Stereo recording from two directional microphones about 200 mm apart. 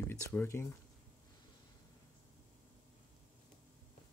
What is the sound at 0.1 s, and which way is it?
Speech, 10° left (ahead or behind).